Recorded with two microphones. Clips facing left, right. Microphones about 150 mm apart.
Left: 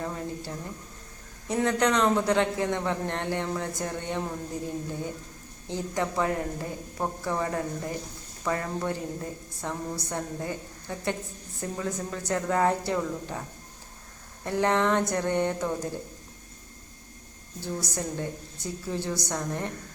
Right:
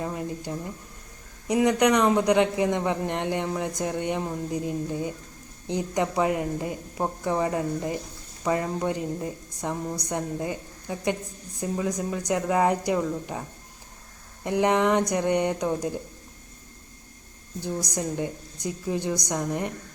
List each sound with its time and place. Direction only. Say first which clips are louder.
0.0 s a man's voice: right 2 dB; 15° right (ahead or behind)
14.4 s a man's voice: right 3 dB; 15° right (ahead or behind)
17.6 s a man's voice: right 3 dB; 15° right (ahead or behind)